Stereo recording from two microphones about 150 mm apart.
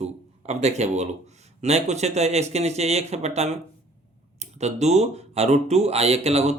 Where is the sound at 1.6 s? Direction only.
45° right (ahead or behind).